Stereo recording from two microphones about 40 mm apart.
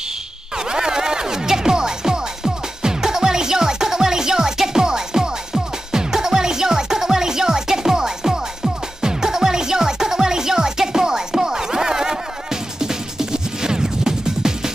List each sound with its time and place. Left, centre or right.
0.6 s music: centre